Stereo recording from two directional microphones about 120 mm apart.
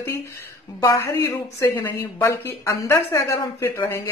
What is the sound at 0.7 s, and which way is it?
Speech, 25° left (ahead or behind).